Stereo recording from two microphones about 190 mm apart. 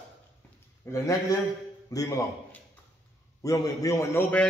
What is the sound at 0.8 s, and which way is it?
A man's voice, 15° left (ahead or behind).